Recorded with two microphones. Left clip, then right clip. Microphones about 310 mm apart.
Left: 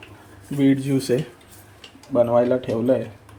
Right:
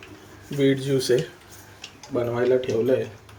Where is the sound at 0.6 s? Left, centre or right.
Centre.